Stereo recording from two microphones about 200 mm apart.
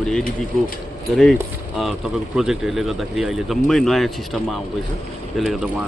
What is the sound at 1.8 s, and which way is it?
A man's voice, centre (ahead or behind).